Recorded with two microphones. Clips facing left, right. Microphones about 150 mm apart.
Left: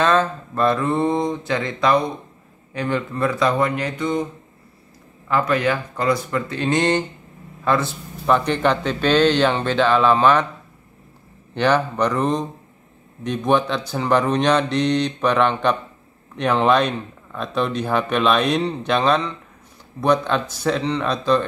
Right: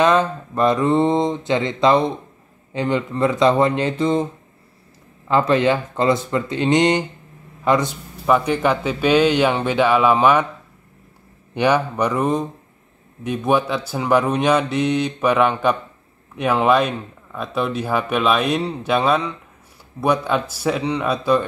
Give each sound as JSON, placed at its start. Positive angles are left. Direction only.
{"t": 0.0, "sound": "speech", "side_deg": -15}
{"t": 5.3, "sound": "a man's voice", "side_deg": -25}
{"t": 11.5, "sound": "a man's voice", "side_deg": -10}